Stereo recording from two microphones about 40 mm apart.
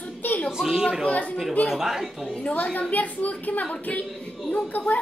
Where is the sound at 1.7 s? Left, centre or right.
Centre.